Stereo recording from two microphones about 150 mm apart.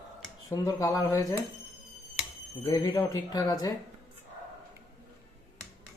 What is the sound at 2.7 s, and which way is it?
Speech, 25° left (ahead or behind).